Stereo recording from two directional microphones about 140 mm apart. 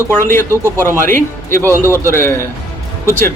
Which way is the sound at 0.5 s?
20° right (ahead or behind).